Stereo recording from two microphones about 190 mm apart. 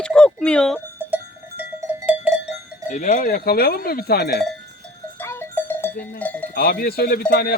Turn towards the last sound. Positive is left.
turn(degrees=55)  # may be behind; listen again after turning